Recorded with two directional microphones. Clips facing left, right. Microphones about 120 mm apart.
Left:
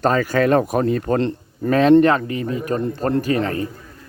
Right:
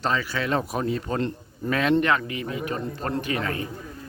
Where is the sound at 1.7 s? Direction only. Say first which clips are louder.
Left 9 dB; 35° left (ahead or behind).